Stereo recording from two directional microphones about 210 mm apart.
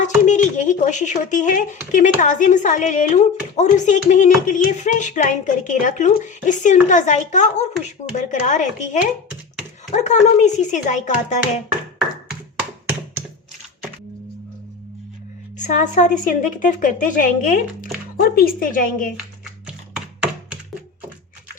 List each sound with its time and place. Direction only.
0.3 s speech: 35° left (ahead or behind)
15.5 s speech: 35° left (ahead or behind)